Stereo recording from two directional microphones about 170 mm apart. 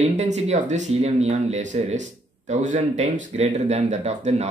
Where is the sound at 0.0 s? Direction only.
40° right (ahead or behind).